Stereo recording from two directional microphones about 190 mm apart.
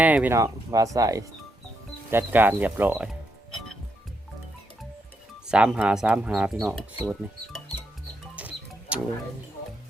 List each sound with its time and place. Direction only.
0.0 s speech: 10° right (ahead or behind)
5.5 s speech: 5° right (ahead or behind)
8.4 s music: 5° right (ahead or behind)